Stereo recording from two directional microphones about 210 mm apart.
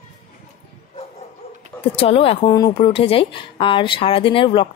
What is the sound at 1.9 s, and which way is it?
Speech, 25° left (ahead or behind).